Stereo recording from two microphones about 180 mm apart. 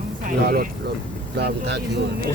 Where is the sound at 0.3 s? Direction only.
55° right (ahead or behind).